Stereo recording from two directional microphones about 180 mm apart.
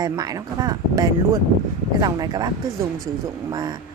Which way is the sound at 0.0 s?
20° right (ahead or behind).